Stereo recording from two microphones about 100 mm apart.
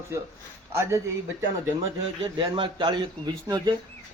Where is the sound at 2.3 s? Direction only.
55° right (ahead or behind).